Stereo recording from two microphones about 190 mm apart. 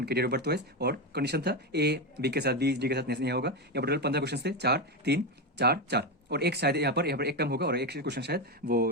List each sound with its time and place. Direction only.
0.0 s speech: 60° right (ahead or behind)